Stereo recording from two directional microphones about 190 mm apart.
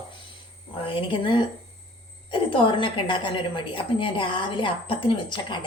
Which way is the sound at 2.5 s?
25° left (ahead or behind).